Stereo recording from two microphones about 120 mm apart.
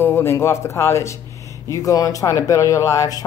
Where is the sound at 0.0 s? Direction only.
20° left (ahead or behind).